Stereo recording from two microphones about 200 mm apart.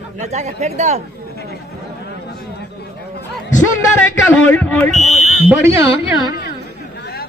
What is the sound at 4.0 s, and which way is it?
Speech, 10° left (ahead or behind).